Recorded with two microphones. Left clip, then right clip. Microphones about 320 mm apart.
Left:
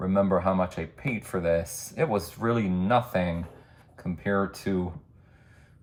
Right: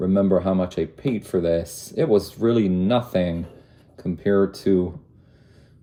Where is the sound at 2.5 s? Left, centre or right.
Left.